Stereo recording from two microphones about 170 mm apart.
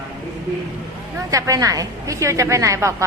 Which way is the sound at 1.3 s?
20° right (ahead or behind).